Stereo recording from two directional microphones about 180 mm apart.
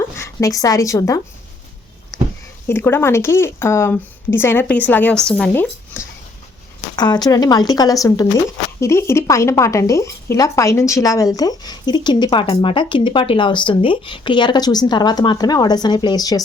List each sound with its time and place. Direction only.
0.2 s a woman's voice: 15° left (ahead or behind)
2.6 s speech: 10° left (ahead or behind)
6.9 s speech: 25° left (ahead or behind)